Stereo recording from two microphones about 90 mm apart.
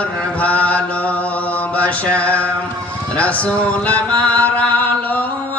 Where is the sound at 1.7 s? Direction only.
15° left (ahead or behind).